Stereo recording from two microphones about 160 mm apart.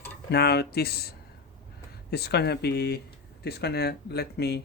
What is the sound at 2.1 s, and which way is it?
Speech, 90° left.